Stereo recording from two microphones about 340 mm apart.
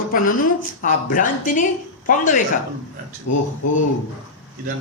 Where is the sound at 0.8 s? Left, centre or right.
Left.